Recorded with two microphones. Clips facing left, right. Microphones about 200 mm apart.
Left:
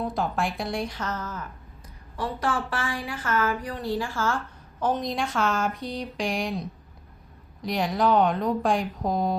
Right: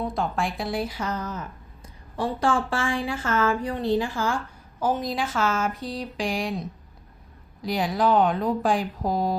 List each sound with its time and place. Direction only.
0.0 s speech: centre (ahead or behind); by 1.5 s 15° right (ahead or behind)
2.1 s speech: 30° right (ahead or behind)
4.8 s speech: 5° right (ahead or behind)